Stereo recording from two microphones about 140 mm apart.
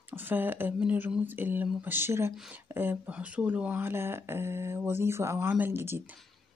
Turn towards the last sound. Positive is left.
turn(degrees=-15)  # may be behind; listen again after turning